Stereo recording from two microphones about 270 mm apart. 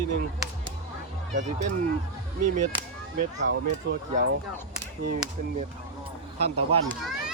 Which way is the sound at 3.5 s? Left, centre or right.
Right.